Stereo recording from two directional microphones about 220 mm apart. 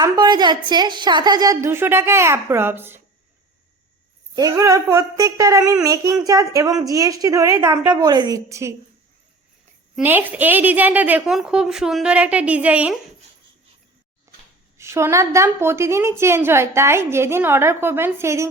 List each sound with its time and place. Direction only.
0.0 s a woman's voice: 20° right (ahead or behind)
4.4 s a woman's voice: 15° right (ahead or behind)
9.9 s a woman's voice: 10° right (ahead or behind)
14.3 s a sound: 15° right (ahead or behind)
14.8 s a woman's voice: 10° right (ahead or behind)